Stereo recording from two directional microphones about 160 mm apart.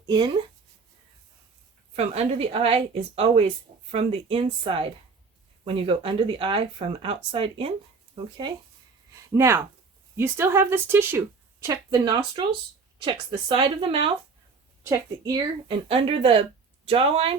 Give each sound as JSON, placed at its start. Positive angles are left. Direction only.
{"t": 2.0, "sound": "a woman's voice", "side_deg": -40}
{"t": 9.3, "sound": "a woman's voice", "side_deg": -20}
{"t": 13.0, "sound": "speech", "side_deg": -35}
{"t": 14.8, "sound": "a woman's voice", "side_deg": -20}
{"t": 15.9, "sound": "speech", "side_deg": -35}